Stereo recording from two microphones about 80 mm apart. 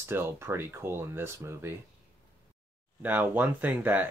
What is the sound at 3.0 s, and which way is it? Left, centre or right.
Speech, right.